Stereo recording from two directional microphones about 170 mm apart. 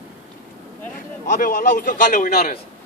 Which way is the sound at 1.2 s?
55° left (ahead or behind).